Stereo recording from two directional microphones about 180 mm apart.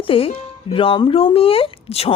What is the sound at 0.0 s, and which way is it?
Music, 30° left (ahead or behind).